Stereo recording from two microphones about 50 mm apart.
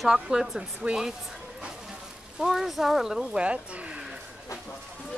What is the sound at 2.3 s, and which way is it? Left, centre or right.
Speech, centre.